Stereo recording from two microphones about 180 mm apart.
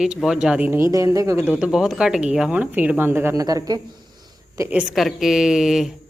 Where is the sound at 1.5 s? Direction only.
5° right (ahead or behind).